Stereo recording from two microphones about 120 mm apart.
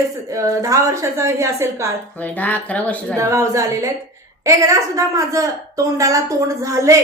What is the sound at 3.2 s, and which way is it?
A woman's voice, 25° right (ahead or behind).